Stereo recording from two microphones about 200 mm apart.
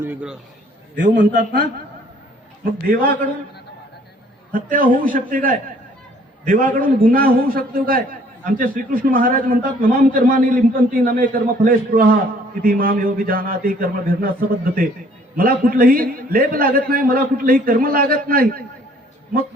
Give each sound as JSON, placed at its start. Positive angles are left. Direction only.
{"t": 0.0, "sound": "a man's voice", "side_deg": -10}
{"t": 0.9, "sound": "a man's voice", "side_deg": -40}
{"t": 2.8, "sound": "a man's voice", "side_deg": -45}
{"t": 4.5, "sound": "a man's voice", "side_deg": -45}